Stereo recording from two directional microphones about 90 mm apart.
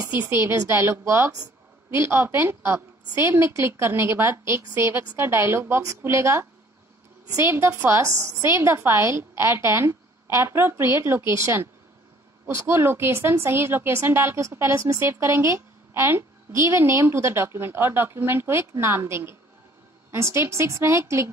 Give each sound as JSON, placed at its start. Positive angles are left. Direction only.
{"t": 0.1, "sound": "a woman's voice", "side_deg": -20}